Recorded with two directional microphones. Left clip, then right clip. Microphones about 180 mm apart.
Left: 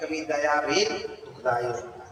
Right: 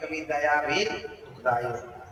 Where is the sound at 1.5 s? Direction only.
30° left (ahead or behind).